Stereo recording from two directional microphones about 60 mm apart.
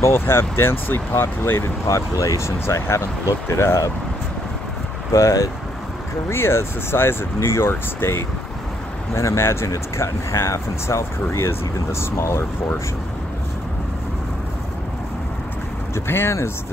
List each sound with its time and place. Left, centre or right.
0.0 s speech: left
5.1 s speech: left
6.2 s speech: left
15.9 s speech: left